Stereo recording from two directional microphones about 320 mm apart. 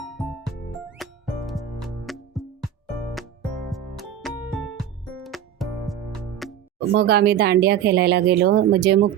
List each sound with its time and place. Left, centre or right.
0.0 s music: centre
3.7 s music: centre
6.9 s speech: right